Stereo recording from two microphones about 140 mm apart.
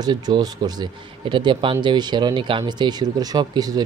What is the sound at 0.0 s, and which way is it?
Speech, 30° right (ahead or behind).